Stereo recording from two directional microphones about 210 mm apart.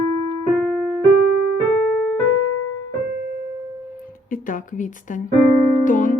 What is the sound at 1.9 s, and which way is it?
Keyboard, 5° right (ahead or behind).